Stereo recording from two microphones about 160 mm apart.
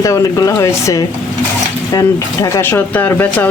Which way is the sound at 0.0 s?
20° left (ahead or behind).